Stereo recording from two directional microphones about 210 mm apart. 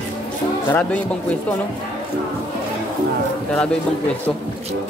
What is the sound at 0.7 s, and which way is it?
Speech, 5° left (ahead or behind).